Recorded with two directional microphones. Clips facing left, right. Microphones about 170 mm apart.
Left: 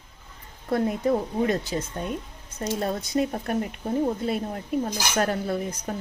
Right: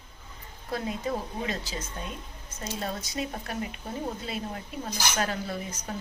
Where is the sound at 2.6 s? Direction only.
45° left (ahead or behind).